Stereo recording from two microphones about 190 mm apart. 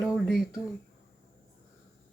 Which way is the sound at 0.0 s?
Centre (ahead or behind).